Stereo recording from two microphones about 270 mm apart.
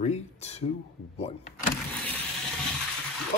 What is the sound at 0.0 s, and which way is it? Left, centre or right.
Speech, left.